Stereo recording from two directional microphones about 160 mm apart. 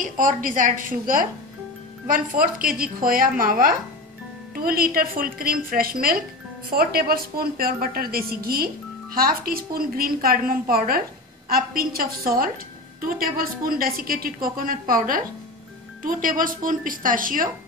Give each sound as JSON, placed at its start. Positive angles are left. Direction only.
{"t": 0.0, "sound": "a woman's voice", "side_deg": -55}